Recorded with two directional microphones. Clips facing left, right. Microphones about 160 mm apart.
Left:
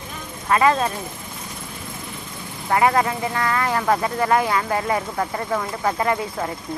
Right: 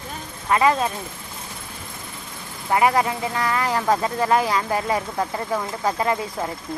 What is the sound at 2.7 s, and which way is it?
Speech, 20° right (ahead or behind).